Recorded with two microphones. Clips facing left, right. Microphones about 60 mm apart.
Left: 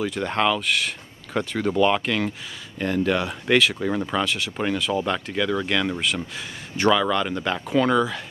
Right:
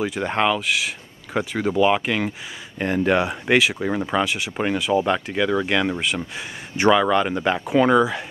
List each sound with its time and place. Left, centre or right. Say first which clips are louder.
0.0 s speech: right 1 dB; centre
2.8 s speech: right 3 dB; right